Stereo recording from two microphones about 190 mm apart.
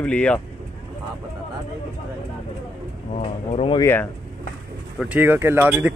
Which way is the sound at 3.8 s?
10° left (ahead or behind).